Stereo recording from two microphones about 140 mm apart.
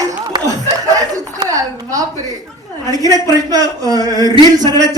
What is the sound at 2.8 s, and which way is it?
Speech, 25° right (ahead or behind).